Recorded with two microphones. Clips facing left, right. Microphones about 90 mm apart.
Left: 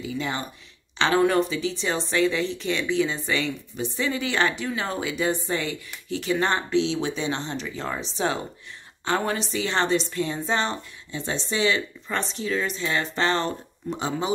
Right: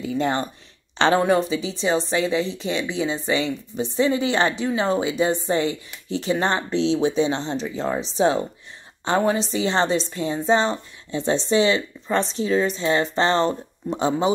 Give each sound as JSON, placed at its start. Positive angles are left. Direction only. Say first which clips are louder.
{"t": 0.0, "sound": "speech", "louder": "right 6 dB", "side_deg": -45}
{"t": 1.5, "sound": "a woman's voice", "louder": "right 4 dB", "side_deg": -20}